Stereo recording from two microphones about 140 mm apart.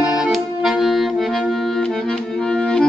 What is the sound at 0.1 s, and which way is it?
Music, centre (ahead or behind).